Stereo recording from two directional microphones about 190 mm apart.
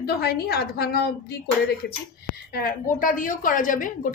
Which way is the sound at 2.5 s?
50° left (ahead or behind).